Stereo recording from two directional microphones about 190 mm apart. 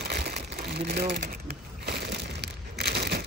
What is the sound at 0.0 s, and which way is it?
Crumpling, 60° right (ahead or behind).